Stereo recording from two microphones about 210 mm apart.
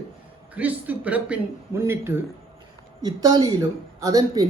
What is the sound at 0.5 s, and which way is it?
Speech, 5° right (ahead or behind).